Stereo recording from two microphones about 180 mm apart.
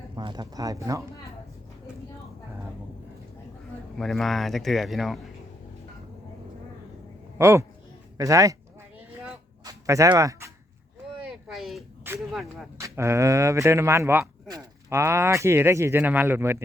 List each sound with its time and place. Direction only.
0.2 s speech: 25° right (ahead or behind)
3.9 s speech: centre (ahead or behind)
7.3 s speech: 15° right (ahead or behind)
9.6 s a sound: 15° right (ahead or behind)
11.2 s a sound: 5° right (ahead or behind)
12.3 s speech: centre (ahead or behind)
12.8 s speech: 15° right (ahead or behind)